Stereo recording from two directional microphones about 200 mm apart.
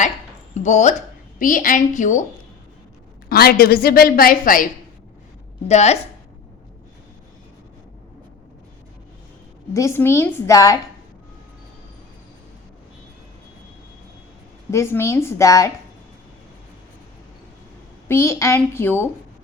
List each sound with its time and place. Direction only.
0.5 s a woman's voice: 35° left (ahead or behind)
3.2 s a woman's voice: 50° left (ahead or behind)
5.6 s a woman's voice: 35° left (ahead or behind)
9.7 s a woman's voice: 15° left (ahead or behind)
14.7 s a woman's voice: 15° left (ahead or behind)
18.1 s a woman's voice: 15° left (ahead or behind)